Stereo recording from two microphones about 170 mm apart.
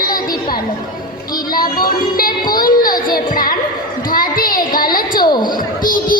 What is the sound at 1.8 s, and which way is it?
Music, 60° left (ahead or behind).